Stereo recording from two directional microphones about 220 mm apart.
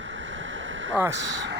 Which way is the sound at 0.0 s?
60° right (ahead or behind).